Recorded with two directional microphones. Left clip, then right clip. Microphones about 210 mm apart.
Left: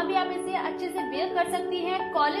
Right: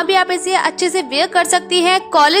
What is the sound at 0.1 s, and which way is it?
Speech, 30° right (ahead or behind).